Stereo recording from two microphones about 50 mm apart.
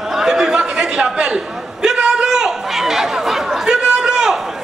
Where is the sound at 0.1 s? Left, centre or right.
Centre.